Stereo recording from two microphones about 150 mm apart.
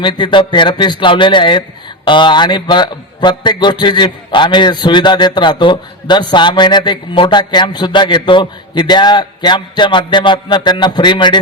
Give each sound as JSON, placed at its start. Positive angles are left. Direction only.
{"t": 0.0, "sound": "a man's voice", "side_deg": 30}